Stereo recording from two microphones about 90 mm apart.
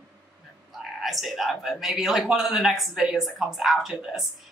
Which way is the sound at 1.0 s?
Centre (ahead or behind).